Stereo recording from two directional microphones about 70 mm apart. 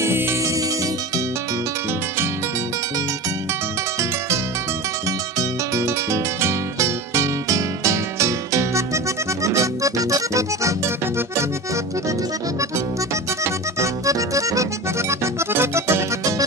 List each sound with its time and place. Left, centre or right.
0.0 s music: right
5.0 s music: right
11.1 s accordion: right